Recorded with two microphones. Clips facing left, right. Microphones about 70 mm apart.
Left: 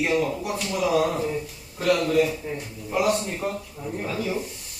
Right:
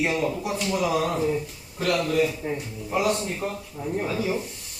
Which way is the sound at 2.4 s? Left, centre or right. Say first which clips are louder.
Right 3 dB; right.